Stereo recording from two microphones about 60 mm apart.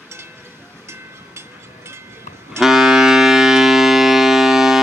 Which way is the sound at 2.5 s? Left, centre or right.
Centre.